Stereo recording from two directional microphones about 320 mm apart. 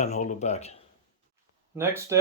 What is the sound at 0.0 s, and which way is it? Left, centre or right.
Speech, left.